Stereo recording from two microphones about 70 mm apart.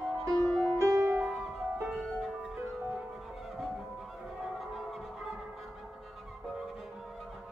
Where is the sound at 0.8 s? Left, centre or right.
Right.